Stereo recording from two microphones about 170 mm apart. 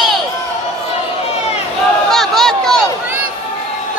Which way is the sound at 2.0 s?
Centre (ahead or behind).